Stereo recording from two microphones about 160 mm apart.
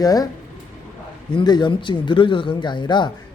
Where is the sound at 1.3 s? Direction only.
30° left (ahead or behind).